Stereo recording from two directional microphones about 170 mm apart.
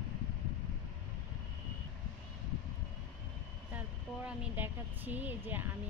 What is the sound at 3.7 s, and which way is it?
Speech, 10° right (ahead or behind).